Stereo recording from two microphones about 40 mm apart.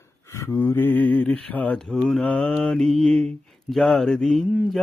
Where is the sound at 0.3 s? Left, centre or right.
Left.